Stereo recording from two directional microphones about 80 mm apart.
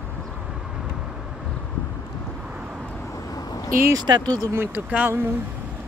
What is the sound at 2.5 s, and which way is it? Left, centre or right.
Vehicle, centre.